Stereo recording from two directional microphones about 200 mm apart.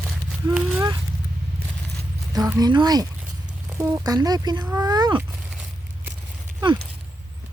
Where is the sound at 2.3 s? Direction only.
20° right (ahead or behind).